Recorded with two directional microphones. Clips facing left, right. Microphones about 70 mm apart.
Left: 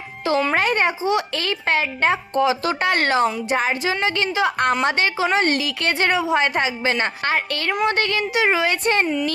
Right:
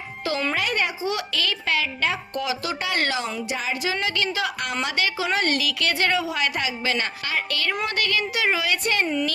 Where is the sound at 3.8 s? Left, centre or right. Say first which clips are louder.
Left 4 dB; left.